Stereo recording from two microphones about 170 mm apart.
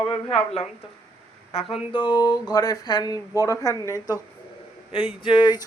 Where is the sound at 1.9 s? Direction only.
25° left (ahead or behind).